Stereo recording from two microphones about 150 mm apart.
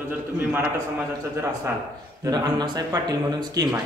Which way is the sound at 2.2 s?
25° right (ahead or behind).